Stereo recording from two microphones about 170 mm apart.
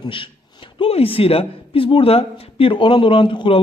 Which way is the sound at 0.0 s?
30° left (ahead or behind).